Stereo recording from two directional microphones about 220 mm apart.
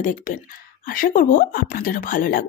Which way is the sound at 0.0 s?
35° left (ahead or behind).